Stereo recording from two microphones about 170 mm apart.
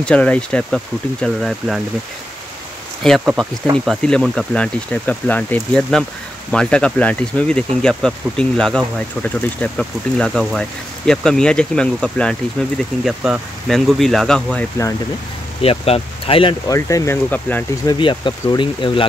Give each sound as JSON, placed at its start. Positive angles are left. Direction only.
{"t": 0.0, "sound": "speech", "side_deg": 5}
{"t": 3.0, "sound": "speech", "side_deg": 0}
{"t": 15.6, "sound": "speech", "side_deg": 35}
{"t": 16.6, "sound": "speech", "side_deg": 20}
{"t": 17.8, "sound": "speech", "side_deg": 30}